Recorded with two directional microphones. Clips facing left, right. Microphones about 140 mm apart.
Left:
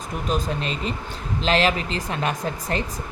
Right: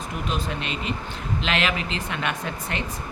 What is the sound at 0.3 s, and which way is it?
Speech, 40° left (ahead or behind).